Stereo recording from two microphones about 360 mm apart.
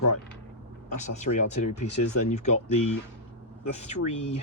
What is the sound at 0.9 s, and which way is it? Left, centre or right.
Speech, centre.